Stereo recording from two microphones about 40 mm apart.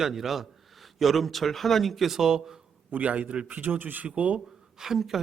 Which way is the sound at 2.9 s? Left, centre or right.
Right.